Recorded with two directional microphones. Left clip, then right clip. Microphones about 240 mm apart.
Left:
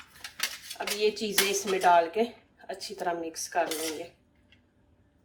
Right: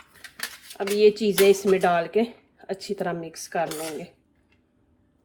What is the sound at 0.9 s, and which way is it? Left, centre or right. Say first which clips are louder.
Speech: right 9 dB; right.